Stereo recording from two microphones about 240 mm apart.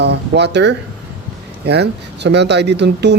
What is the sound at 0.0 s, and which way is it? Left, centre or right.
Speech, right.